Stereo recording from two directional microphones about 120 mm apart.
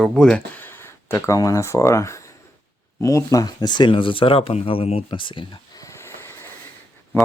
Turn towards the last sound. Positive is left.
turn(degrees=20)  # may be behind; listen again after turning